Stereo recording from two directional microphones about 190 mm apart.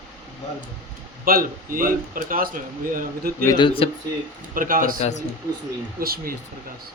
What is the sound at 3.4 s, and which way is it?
Speech, 20° left (ahead or behind).